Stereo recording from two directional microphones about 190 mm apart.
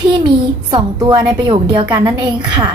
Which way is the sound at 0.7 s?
20° right (ahead or behind).